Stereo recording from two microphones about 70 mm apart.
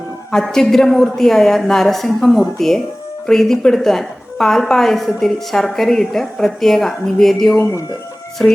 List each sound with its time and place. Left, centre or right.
0.3 s a woman's voice: centre
7.5 s speech: left
8.4 s speech: centre